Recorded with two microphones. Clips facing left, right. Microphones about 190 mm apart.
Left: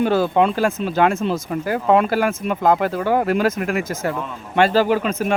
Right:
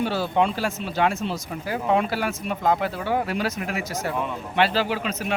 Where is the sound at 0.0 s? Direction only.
50° left (ahead or behind).